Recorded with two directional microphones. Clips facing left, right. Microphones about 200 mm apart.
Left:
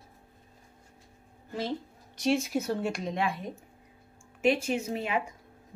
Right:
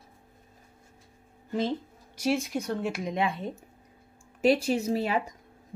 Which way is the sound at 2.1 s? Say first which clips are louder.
Left 1 dB; centre (ahead or behind).